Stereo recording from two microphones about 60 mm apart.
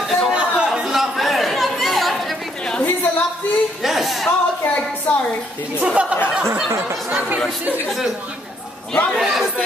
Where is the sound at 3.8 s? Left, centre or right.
Centre.